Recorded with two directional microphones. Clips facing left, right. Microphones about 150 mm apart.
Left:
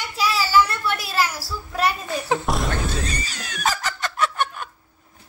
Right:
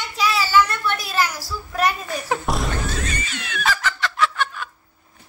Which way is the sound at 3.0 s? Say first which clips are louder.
Even; 35° left (ahead or behind).